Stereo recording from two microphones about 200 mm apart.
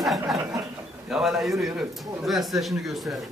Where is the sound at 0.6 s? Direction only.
Centre (ahead or behind).